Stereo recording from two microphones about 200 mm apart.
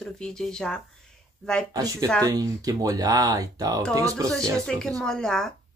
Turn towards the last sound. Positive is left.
turn(degrees=5)  # may be behind; listen again after turning